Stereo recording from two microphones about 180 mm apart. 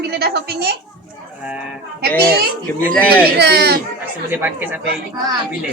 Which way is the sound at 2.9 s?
10° left (ahead or behind).